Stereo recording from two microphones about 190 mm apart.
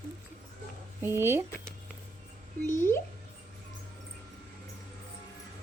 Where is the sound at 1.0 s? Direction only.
10° right (ahead or behind).